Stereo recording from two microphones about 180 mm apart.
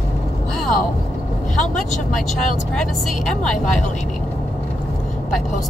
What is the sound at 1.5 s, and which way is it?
Speech, centre (ahead or behind).